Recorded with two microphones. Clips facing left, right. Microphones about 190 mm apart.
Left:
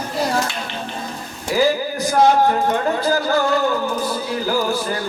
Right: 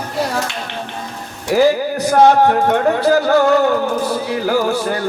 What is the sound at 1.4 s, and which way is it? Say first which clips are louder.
Speech: right 5 dB; 65° right (ahead or behind).